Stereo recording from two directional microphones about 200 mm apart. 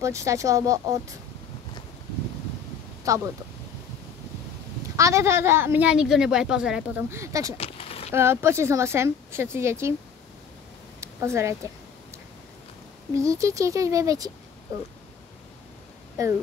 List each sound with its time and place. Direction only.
0.0 s a woman's voice: 15° right (ahead or behind)
3.1 s a woman's voice: 15° right (ahead or behind)
4.9 s a woman's voice: 15° right (ahead or behind)
7.5 s a sound: 30° left (ahead or behind)
8.1 s a woman's voice: 10° right (ahead or behind)
11.0 s a sound: 15° right (ahead or behind)
13.1 s a woman's voice: 15° right (ahead or behind)
16.2 s a woman's voice: 15° right (ahead or behind)